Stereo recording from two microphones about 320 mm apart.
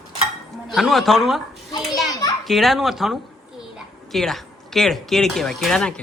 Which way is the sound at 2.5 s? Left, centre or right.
Centre.